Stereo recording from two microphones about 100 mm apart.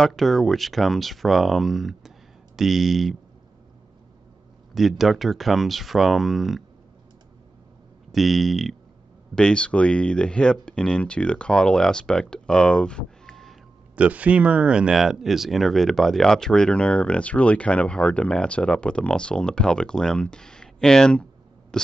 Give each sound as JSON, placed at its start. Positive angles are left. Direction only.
{"t": 0.0, "sound": "speech", "side_deg": 5}
{"t": 4.7, "sound": "speech", "side_deg": 0}
{"t": 8.1, "sound": "speech", "side_deg": 0}
{"t": 13.9, "sound": "speech", "side_deg": -15}
{"t": 21.7, "sound": "a sound", "side_deg": 5}